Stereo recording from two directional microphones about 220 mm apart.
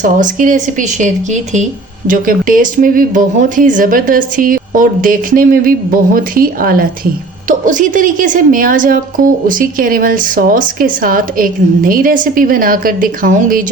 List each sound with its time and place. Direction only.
0.0 s speech: 35° right (ahead or behind)